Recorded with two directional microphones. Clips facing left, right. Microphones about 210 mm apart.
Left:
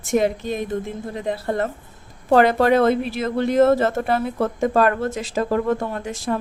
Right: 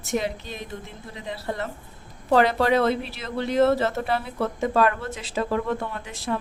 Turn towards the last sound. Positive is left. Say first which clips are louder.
# left 6 dB
turn(degrees=45)  # may be behind; listen again after turning